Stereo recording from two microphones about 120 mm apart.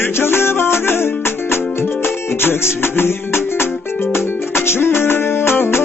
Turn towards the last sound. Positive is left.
turn(degrees=20)  # may be behind; listen again after turning